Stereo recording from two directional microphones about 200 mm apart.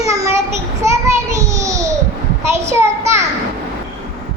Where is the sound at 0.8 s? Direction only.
15° right (ahead or behind).